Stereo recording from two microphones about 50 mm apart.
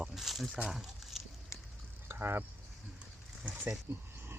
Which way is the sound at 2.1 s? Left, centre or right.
Right.